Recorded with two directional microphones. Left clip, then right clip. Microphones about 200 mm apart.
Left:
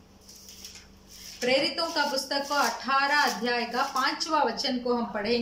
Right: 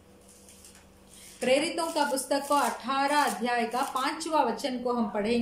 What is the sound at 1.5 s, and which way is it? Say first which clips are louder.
A woman's voice: even; 20° right (ahead or behind).